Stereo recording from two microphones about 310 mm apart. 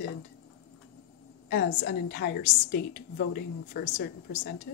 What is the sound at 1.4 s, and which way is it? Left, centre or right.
A woman's voice, left.